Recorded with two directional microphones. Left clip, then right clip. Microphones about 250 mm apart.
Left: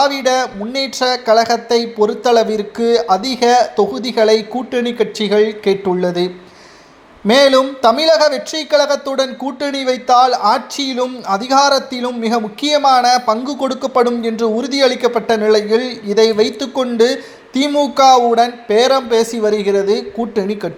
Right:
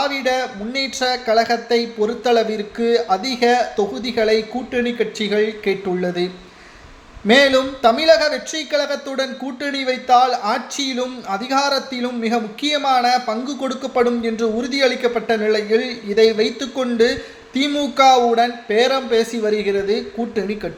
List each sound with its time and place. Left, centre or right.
0.0 s speech: centre